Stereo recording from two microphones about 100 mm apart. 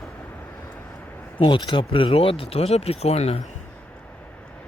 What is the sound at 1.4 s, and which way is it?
Speech, 50° left (ahead or behind).